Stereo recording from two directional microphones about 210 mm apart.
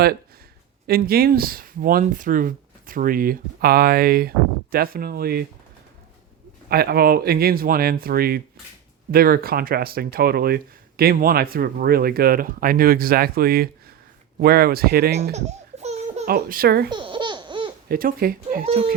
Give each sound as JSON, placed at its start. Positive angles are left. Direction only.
{"t": 0.9, "sound": "speech", "side_deg": -45}
{"t": 6.7, "sound": "speech", "side_deg": -45}
{"t": 15.2, "sound": "baby laughter", "side_deg": -30}
{"t": 16.2, "sound": "speech", "side_deg": -45}
{"t": 16.9, "sound": "laughter", "side_deg": -25}
{"t": 17.8, "sound": "speech", "side_deg": -45}
{"t": 18.6, "sound": "speech", "side_deg": -30}